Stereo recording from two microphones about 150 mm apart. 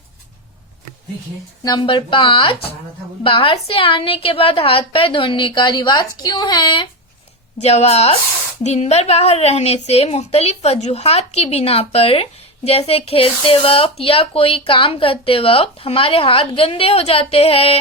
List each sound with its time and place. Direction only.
1.6 s a woman's voice: 30° left (ahead or behind)
7.6 s a woman's voice: 45° left (ahead or behind)